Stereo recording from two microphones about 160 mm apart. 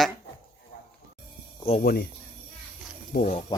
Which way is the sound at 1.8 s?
65° left (ahead or behind).